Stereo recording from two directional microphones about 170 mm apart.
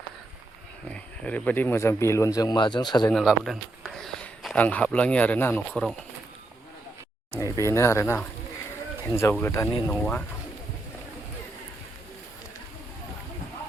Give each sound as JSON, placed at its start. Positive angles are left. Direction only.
{"t": 0.9, "sound": "speech", "side_deg": 10}
{"t": 3.1, "sound": "speech", "side_deg": 0}
{"t": 7.3, "sound": "speech", "side_deg": 20}